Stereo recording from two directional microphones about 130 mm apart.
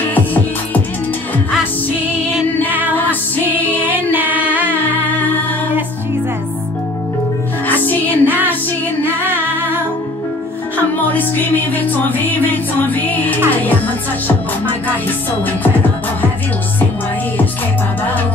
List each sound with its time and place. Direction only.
0.1 s music: 15° left (ahead or behind)
3.4 s music: 15° right (ahead or behind)
4.1 s a capella: 15° right (ahead or behind)
7.6 s music: 15° left (ahead or behind)
8.3 s music: 15° right (ahead or behind)
11.1 s music: 15° left (ahead or behind)